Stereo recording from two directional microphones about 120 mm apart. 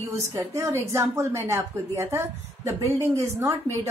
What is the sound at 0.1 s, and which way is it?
A woman's voice, 25° right (ahead or behind).